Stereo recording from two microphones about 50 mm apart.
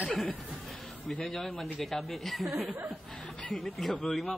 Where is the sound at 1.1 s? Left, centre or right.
Centre.